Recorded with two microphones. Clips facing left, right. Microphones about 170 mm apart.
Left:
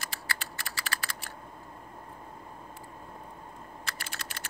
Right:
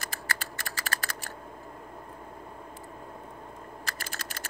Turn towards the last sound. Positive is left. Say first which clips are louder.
# right 2 dB
turn(degrees=-45)  # may be behind; listen again after turning